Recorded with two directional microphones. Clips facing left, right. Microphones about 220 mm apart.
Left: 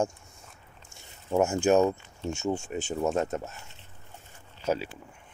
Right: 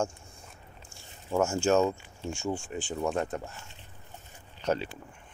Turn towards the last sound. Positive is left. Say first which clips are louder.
# left 1 dB
turn(degrees=5)  # may be behind; listen again after turning